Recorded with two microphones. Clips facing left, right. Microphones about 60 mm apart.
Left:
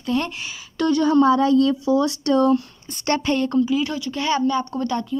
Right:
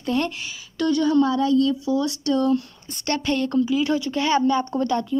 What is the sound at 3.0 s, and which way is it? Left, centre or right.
Speech, centre.